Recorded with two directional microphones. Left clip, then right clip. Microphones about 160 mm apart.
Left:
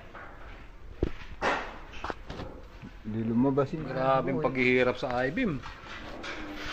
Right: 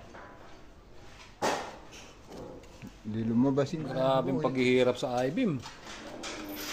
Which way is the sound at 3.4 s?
5° left (ahead or behind).